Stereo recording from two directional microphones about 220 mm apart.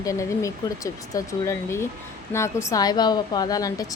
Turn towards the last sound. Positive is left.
turn(degrees=15)  # may be behind; listen again after turning